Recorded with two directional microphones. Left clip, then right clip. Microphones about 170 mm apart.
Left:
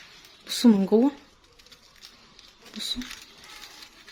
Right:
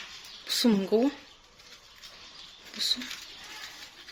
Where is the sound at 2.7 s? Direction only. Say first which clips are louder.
Right 3 dB; 55° left (ahead or behind).